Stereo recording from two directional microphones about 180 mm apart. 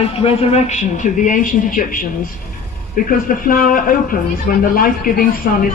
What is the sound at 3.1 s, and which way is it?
A man's voice, 50° left (ahead or behind).